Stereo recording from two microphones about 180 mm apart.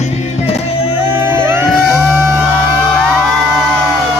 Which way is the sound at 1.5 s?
5° right (ahead or behind).